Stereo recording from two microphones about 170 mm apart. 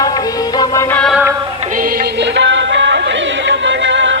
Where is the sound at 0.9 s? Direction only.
Centre (ahead or behind).